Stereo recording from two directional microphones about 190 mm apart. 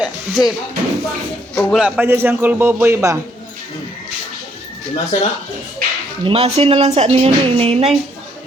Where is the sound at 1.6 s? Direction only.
Centre (ahead or behind).